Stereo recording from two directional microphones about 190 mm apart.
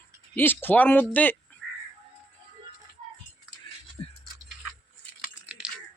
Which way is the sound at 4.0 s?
30° left (ahead or behind).